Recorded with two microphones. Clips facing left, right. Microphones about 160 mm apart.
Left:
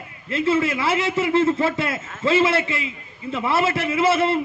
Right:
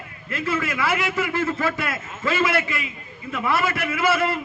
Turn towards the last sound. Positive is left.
turn(degrees=25)  # may be behind; listen again after turning